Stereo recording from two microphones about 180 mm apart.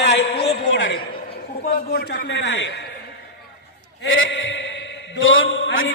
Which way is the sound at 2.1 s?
65° left (ahead or behind).